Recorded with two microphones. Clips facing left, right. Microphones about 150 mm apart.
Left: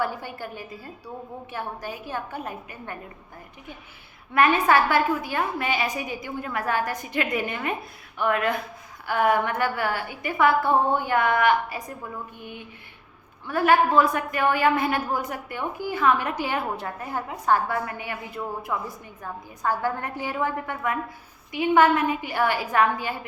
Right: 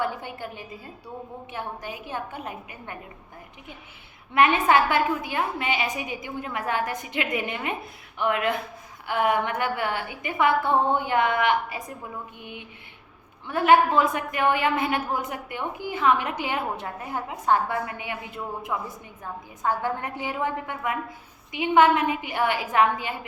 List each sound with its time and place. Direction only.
0.0 s a woman's voice: 20° right (ahead or behind)
4.4 s a woman's voice: 20° right (ahead or behind)
19.6 s a woman's voice: 20° right (ahead or behind)